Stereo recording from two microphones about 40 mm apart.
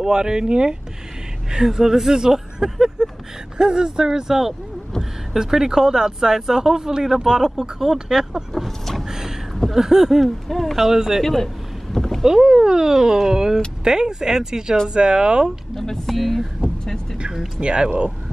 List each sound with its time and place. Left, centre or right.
0.0 s speech: centre
8.5 s vehicle: centre
9.0 s vehicle: centre
9.8 s speech: centre
10.2 s speech: centre
10.8 s speech: centre
11.2 s boat: centre
12.3 s speech: centre
15.7 s speech: centre
16.8 s vehicle: centre
17.2 s a sound: centre
17.6 s speech: right